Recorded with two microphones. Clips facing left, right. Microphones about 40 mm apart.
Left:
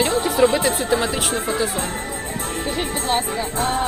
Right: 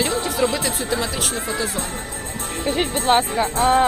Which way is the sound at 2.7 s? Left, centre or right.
Right.